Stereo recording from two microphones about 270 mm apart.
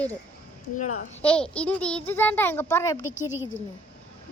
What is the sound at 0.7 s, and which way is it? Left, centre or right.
Speech, left.